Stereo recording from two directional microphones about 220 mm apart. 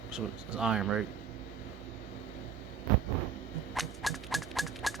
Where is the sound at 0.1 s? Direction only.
5° right (ahead or behind).